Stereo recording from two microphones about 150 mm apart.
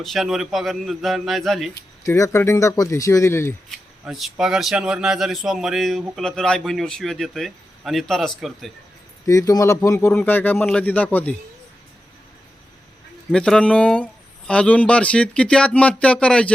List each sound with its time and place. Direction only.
0.0 s speech: centre (ahead or behind)
2.0 s speech: 20° left (ahead or behind)
3.7 s speech: centre (ahead or behind)
9.2 s speech: 20° left (ahead or behind)
13.3 s speech: 5° left (ahead or behind)